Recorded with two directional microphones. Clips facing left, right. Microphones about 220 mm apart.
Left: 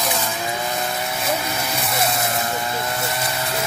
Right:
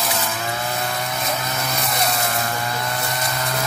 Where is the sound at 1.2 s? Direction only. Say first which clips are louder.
Left 2 dB; 10° left (ahead or behind).